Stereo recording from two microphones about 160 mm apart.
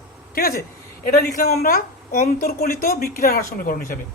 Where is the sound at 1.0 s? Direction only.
65° left (ahead or behind).